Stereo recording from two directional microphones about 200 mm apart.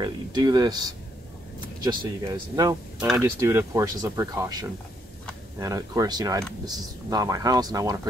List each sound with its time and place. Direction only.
0.0 s speech: 20° right (ahead or behind)